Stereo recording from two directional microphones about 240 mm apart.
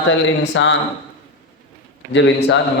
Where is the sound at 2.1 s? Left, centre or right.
Left.